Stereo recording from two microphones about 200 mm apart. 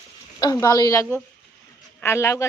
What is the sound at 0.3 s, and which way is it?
A woman's voice, 20° left (ahead or behind).